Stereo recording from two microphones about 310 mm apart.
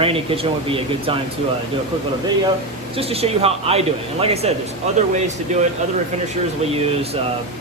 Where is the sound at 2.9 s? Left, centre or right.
Centre.